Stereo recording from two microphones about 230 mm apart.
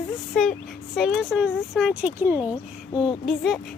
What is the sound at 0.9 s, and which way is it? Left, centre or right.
Speech, centre.